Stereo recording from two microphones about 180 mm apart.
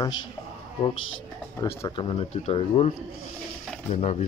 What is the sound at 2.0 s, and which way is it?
Speech, 30° left (ahead or behind).